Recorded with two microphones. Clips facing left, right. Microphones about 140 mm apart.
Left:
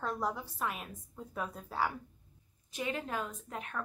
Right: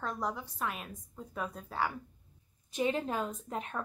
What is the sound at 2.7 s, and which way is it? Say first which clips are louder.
A woman's voice: right 5 dB; 25° right (ahead or behind).